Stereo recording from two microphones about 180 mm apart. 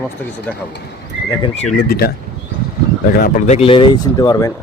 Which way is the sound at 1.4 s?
35° left (ahead or behind).